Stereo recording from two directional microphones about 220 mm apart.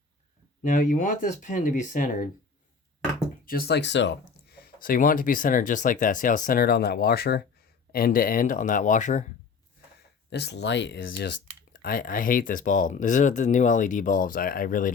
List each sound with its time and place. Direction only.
0.6 s speech: 35° left (ahead or behind)
3.4 s speech: 45° left (ahead or behind)
4.6 s speech: 40° left (ahead or behind)
10.2 s speech: 50° left (ahead or behind)
11.7 s speech: 40° left (ahead or behind)